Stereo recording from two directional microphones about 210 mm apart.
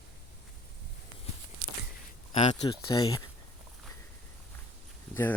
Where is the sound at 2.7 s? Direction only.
20° left (ahead or behind).